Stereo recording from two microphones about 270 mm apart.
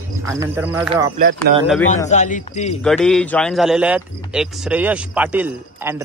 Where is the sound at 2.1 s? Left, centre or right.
Left.